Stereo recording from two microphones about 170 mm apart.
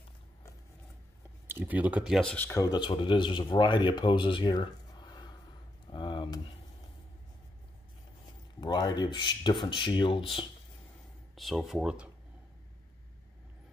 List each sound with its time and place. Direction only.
1.5 s speech: 10° right (ahead or behind); by 5.3 s 25° left (ahead or behind)
5.9 s a sound: 30° left (ahead or behind)
8.5 s speech: 25° left (ahead or behind)
11.3 s speech: centre (ahead or behind)